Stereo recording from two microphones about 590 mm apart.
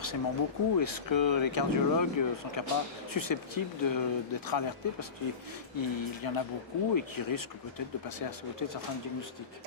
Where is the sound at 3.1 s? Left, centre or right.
Left.